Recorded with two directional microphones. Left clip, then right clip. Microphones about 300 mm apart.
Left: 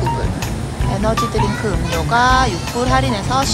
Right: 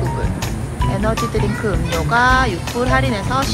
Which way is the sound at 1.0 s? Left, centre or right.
Centre.